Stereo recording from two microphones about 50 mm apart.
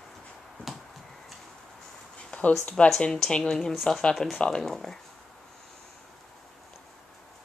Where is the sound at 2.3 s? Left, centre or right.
Left.